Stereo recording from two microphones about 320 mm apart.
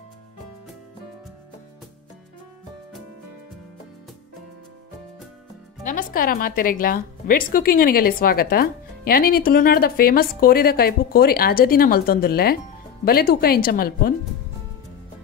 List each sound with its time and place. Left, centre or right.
5.9 s a woman's voice: left